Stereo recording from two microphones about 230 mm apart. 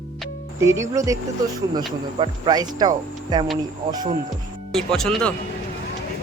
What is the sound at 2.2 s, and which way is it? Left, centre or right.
Speech, centre.